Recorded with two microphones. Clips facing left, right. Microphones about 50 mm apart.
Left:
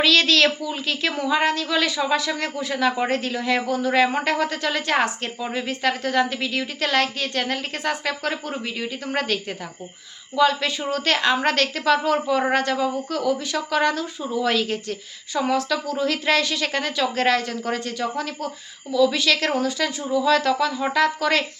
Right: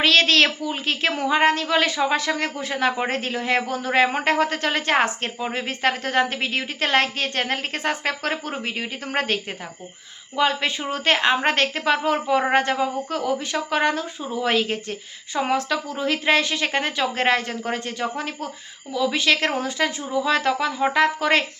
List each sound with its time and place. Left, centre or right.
0.0 s speech: right